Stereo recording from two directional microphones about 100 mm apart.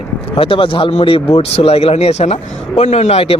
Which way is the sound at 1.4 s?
90° left.